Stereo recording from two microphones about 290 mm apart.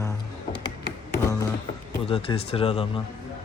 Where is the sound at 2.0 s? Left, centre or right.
Centre.